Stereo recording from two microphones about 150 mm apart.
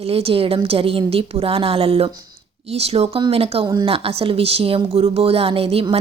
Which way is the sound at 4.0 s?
40° right (ahead or behind).